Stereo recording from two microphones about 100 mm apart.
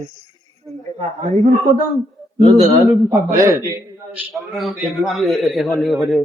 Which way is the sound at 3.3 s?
30° right (ahead or behind).